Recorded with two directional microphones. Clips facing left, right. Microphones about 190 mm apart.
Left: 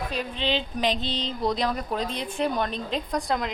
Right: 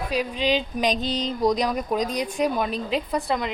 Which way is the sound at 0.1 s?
10° right (ahead or behind).